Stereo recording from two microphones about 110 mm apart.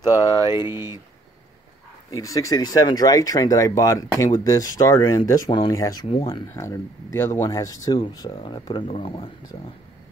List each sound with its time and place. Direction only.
0.0 s speech: 35° left (ahead or behind)
0.7 s speech: 20° right (ahead or behind)
2.1 s speech: 30° left (ahead or behind); by 9.3 s 55° left (ahead or behind)